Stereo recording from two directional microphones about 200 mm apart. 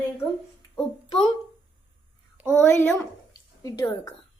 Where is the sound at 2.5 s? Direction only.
10° left (ahead or behind).